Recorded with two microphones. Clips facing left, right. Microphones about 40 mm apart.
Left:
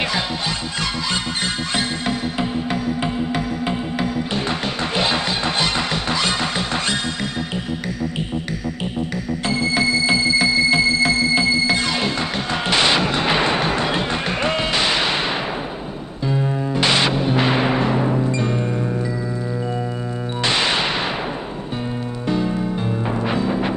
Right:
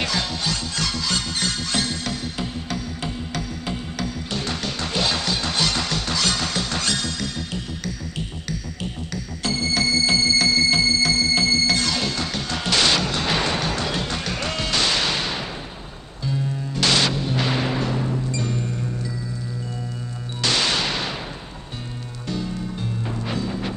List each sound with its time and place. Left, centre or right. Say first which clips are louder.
0.0 s music: left 3 dB; left
16.7 s music: left 2 dB; left
20.4 s music: left 2 dB; left
22.3 s music: left 7 dB; left